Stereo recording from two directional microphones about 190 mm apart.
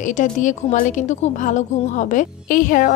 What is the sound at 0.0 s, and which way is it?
A woman's voice, 40° left (ahead or behind).